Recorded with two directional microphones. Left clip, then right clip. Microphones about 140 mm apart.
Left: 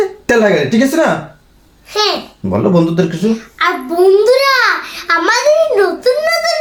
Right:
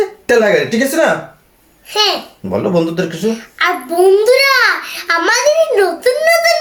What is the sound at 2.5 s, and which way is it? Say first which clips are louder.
Speech: left 2 dB; 15° left (ahead or behind).